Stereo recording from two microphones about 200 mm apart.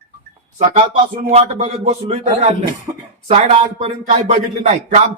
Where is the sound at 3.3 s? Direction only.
35° right (ahead or behind).